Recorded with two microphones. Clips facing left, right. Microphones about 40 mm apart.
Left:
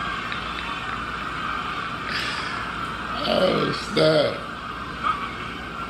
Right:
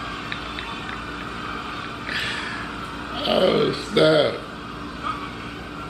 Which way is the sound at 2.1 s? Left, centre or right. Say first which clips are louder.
Right 2 dB; right.